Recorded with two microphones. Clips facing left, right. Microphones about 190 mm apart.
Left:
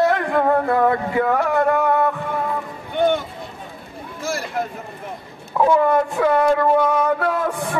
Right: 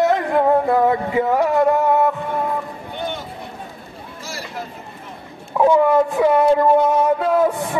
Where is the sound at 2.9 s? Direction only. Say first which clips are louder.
Left 10 dB; 55° left (ahead or behind).